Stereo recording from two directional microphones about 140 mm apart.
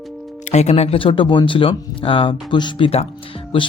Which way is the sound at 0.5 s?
50° left (ahead or behind).